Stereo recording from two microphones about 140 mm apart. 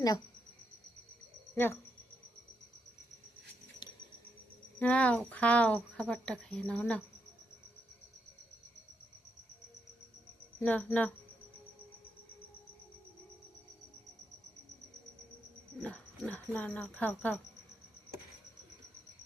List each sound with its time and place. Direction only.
1.5 s speech: 15° left (ahead or behind)
4.8 s speech: 10° left (ahead or behind)
10.6 s speech: 10° left (ahead or behind)
15.8 s speech: 10° left (ahead or behind)